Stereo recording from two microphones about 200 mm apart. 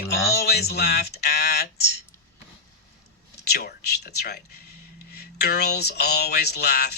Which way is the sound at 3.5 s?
55° left (ahead or behind).